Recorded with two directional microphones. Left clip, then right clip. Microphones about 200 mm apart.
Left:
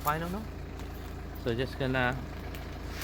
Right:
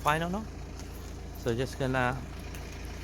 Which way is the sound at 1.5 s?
25° right (ahead or behind).